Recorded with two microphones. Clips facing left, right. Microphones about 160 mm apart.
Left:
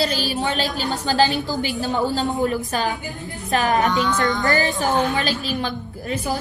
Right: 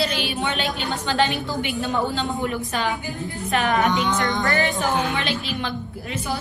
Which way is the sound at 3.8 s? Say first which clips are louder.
Left 1 dB; 20° right (ahead or behind).